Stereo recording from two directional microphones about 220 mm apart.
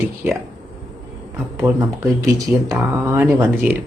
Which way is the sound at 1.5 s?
15° right (ahead or behind).